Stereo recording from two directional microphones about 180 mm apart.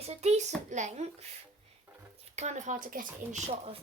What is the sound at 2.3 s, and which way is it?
A woman's voice, 40° right (ahead or behind).